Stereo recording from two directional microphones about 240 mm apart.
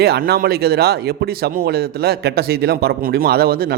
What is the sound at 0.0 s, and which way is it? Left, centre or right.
Speech, right.